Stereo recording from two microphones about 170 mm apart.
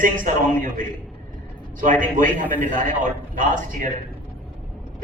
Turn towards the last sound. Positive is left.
turn(degrees=-50)  # may be behind; listen again after turning